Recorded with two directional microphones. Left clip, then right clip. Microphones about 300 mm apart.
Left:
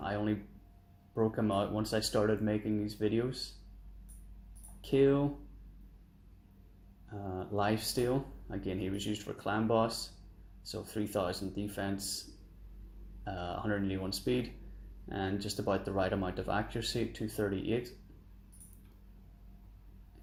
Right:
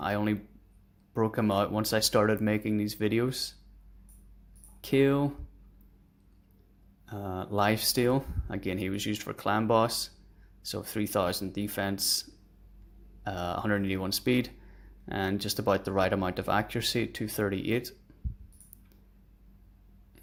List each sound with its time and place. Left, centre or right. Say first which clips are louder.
0.0 s speech: right 5 dB; right
4.8 s speech: right 2 dB; right
7.0 s speech: right 4 dB; right
13.2 s speech: right 6 dB; right